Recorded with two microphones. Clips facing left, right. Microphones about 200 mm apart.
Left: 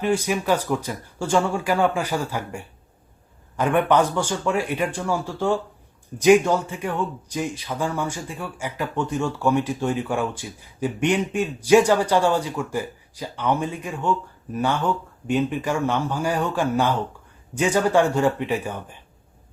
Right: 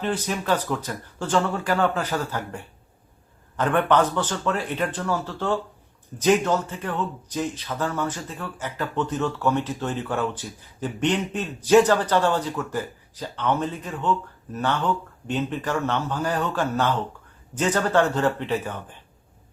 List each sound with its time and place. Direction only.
0.0 s speech: 10° left (ahead or behind)